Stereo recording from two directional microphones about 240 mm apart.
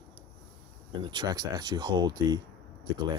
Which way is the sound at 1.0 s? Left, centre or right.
Centre.